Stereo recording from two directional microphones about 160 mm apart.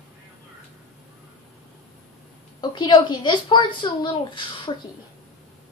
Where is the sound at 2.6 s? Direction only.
30° left (ahead or behind).